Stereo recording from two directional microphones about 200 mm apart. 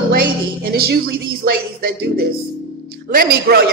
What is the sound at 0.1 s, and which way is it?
A woman's voice, 50° right (ahead or behind).